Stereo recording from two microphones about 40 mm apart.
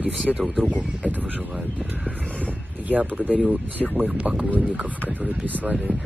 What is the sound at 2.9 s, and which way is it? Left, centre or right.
Speech, right.